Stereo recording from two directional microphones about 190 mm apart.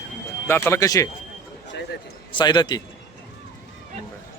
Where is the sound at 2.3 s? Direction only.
25° left (ahead or behind).